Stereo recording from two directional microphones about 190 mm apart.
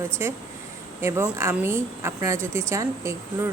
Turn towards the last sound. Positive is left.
turn(degrees=-15)  # may be behind; listen again after turning